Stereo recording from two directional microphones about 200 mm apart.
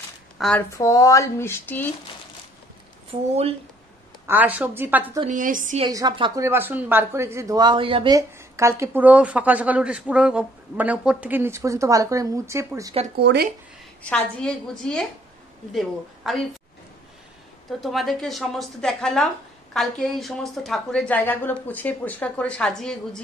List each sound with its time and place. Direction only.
0.4 s speech: 5° left (ahead or behind)
0.7 s speech: 15° left (ahead or behind)
3.1 s a woman's voice: 30° right (ahead or behind)
4.3 s speech: 10° right (ahead or behind)
5.3 s a woman's voice: 40° right (ahead or behind)
5.9 s speech: 20° right (ahead or behind)
13.1 s speech: 55° right (ahead or behind)
14.0 s a woman's voice: 5° left (ahead or behind)
17.6 s a woman's voice: centre (ahead or behind)